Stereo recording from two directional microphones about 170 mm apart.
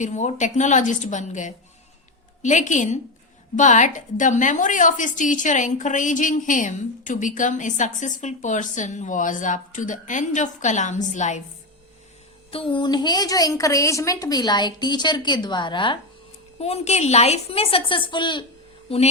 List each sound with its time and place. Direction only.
0.0 s a woman's voice: 45° left (ahead or behind)
12.5 s a woman's voice: 30° left (ahead or behind)